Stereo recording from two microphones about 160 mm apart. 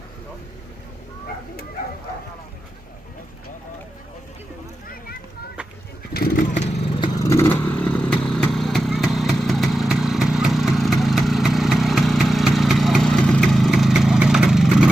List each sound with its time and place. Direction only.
6.1 s vehicle: 65° left (ahead or behind)
7.0 s vehicle: 20° left (ahead or behind); by 14.8 s 5° right (ahead or behind)